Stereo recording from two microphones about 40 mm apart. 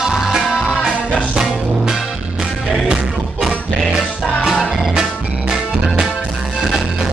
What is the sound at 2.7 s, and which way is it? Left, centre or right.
Music, centre.